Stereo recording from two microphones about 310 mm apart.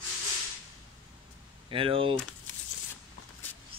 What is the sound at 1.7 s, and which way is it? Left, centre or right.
Speech, centre.